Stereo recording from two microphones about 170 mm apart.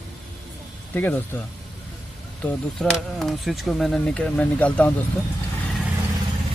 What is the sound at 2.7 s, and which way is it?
Speech, centre (ahead or behind).